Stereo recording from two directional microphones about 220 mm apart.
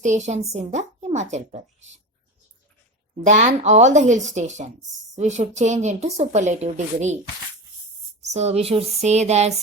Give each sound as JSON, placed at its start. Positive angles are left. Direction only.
{"t": 0.0, "sound": "speech", "side_deg": -35}
{"t": 3.2, "sound": "speech", "side_deg": -30}
{"t": 8.2, "sound": "speech", "side_deg": -30}